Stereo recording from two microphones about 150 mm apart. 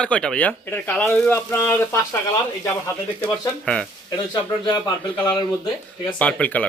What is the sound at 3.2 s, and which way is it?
Speech, 5° left (ahead or behind).